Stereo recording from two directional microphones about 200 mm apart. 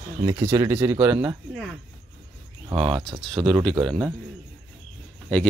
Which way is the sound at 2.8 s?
25° right (ahead or behind).